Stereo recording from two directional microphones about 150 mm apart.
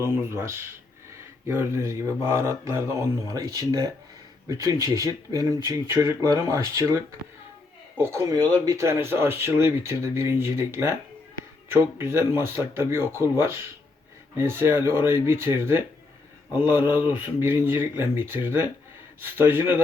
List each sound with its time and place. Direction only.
0.0 s speech: 15° right (ahead or behind)
7.9 s speech: 20° right (ahead or behind)
14.3 s speech: 15° right (ahead or behind)